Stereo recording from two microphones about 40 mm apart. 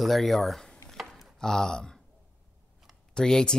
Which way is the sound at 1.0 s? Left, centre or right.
Centre.